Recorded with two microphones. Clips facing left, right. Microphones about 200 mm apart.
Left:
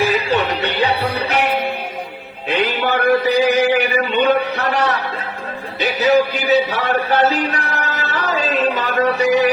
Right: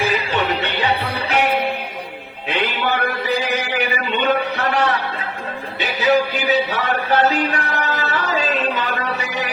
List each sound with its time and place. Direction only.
0.0 s music: 40° left (ahead or behind)
2.5 s speech: 40° left (ahead or behind)